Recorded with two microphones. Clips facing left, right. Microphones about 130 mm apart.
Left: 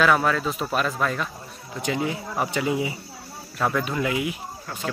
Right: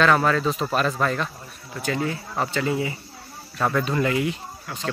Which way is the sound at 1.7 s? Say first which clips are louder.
Even; 15° left (ahead or behind).